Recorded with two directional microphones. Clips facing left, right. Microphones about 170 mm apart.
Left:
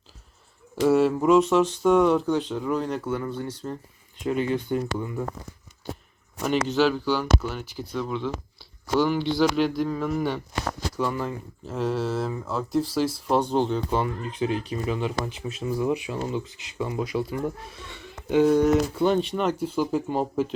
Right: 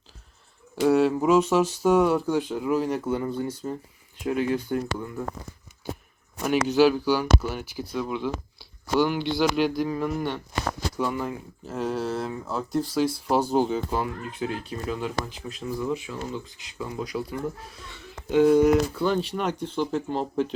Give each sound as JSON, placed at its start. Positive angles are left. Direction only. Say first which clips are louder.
{"t": 0.8, "sound": "speech", "louder": "even", "side_deg": 0}
{"t": 3.0, "sound": "speech", "louder": "right 2 dB", "side_deg": -20}
{"t": 6.4, "sound": "speech", "louder": "right 2 dB", "side_deg": -5}
{"t": 10.8, "sound": "speech", "louder": "left 2 dB", "side_deg": -10}
{"t": 15.8, "sound": "speech", "louder": "left 4 dB", "side_deg": 15}
{"t": 16.7, "sound": "speech", "louder": "left 4 dB", "side_deg": 0}
{"t": 18.9, "sound": "speech", "louder": "left 3 dB", "side_deg": 25}
{"t": 19.2, "sound": "speech", "louder": "left 3 dB", "side_deg": 0}